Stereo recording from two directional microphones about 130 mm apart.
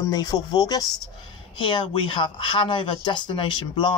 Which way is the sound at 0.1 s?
30° left (ahead or behind).